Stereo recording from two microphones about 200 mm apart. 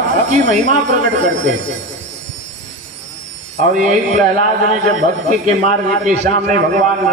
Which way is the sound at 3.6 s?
40° right (ahead or behind).